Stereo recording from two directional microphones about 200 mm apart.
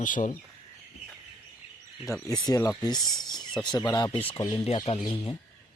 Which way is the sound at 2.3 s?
20° left (ahead or behind).